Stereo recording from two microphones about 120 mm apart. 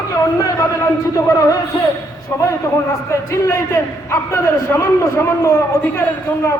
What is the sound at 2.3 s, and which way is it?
A man's voice, 25° left (ahead or behind).